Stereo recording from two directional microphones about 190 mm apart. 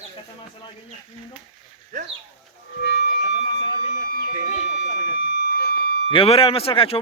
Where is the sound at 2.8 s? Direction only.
65° left (ahead or behind).